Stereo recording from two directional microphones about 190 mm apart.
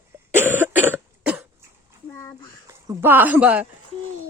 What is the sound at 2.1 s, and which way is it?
Speech, 15° left (ahead or behind).